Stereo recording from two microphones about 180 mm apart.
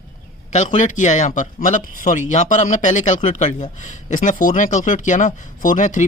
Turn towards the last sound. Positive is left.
turn(degrees=45)  # may be behind; listen again after turning